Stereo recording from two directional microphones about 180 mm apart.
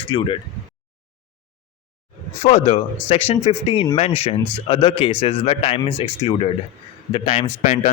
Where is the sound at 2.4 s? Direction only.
40° left (ahead or behind).